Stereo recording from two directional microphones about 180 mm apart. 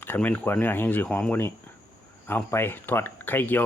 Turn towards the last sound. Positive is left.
turn(degrees=10)  # may be behind; listen again after turning